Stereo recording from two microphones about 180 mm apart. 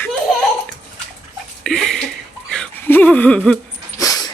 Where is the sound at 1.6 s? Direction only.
5° left (ahead or behind).